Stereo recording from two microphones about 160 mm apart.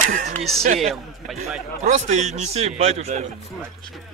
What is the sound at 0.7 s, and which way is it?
Speech, centre (ahead or behind).